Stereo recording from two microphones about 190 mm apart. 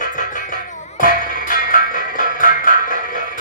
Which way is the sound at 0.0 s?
45° left (ahead or behind).